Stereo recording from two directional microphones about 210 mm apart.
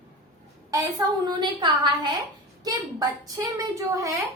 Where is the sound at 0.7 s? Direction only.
15° right (ahead or behind).